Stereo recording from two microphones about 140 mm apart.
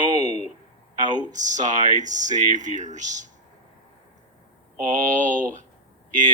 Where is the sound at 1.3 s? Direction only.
60° right (ahead or behind).